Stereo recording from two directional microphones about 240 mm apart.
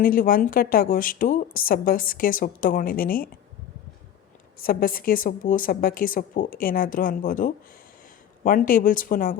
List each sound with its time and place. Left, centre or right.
0.0 s a woman's voice: left
4.6 s a woman's voice: left